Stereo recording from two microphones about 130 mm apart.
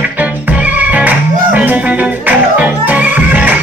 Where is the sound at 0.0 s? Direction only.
10° right (ahead or behind).